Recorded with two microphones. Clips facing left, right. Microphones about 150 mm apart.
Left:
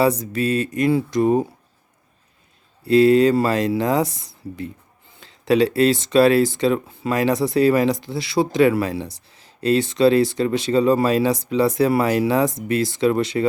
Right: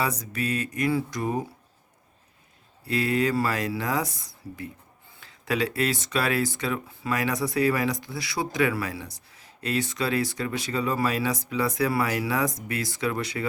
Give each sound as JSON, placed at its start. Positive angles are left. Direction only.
{"t": 0.0, "sound": "speech", "side_deg": 25}
{"t": 2.8, "sound": "speech", "side_deg": 25}